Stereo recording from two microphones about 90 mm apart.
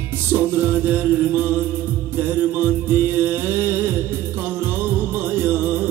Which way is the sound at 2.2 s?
20° right (ahead or behind).